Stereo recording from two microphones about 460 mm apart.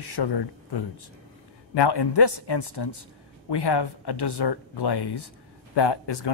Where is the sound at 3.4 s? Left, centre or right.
Left.